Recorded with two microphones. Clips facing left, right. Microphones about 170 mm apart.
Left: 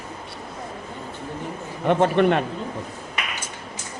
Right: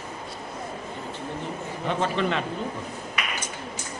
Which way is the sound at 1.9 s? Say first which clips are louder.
Left 8 dB; 60° left (ahead or behind).